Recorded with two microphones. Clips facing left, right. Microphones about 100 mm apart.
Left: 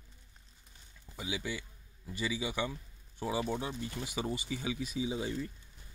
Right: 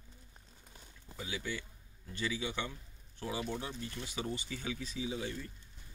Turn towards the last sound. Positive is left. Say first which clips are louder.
# left 4 dB
turn(degrees=20)  # may be behind; listen again after turning